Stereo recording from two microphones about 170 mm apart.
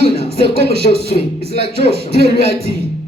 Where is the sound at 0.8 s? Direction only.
45° left (ahead or behind).